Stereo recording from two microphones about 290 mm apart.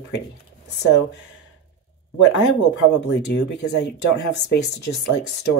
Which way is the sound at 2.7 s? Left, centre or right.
Left.